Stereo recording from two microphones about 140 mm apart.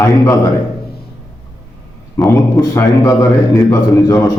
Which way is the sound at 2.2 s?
20° left (ahead or behind).